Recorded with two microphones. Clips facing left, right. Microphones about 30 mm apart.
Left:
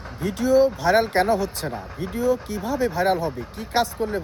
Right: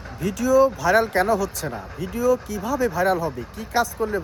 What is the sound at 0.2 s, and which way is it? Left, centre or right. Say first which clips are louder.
Speech: right 1 dB; left.